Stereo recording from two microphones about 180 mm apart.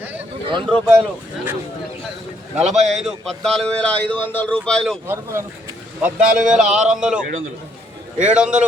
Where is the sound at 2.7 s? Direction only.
40° right (ahead or behind).